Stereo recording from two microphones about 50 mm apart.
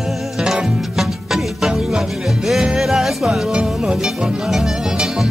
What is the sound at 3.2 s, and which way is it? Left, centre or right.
Music, centre.